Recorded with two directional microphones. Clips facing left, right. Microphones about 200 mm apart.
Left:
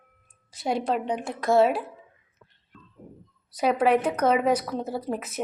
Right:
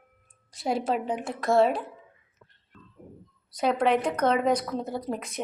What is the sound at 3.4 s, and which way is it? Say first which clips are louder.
Speech: left 2 dB; 5° left (ahead or behind).